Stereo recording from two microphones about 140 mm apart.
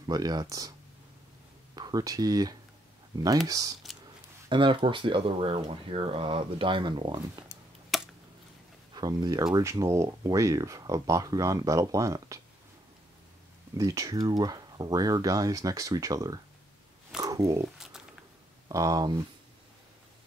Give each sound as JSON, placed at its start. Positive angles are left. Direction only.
{"t": 0.1, "sound": "speech", "side_deg": -30}
{"t": 1.8, "sound": "speech", "side_deg": -30}
{"t": 4.5, "sound": "speech", "side_deg": -35}
{"t": 7.9, "sound": "a sound", "side_deg": 0}
{"t": 8.9, "sound": "speech", "side_deg": -30}
{"t": 13.7, "sound": "speech", "side_deg": -25}
{"t": 18.7, "sound": "speech", "side_deg": -25}